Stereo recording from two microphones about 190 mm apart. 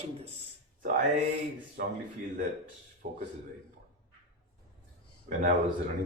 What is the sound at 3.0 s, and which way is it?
Speech, 45° right (ahead or behind).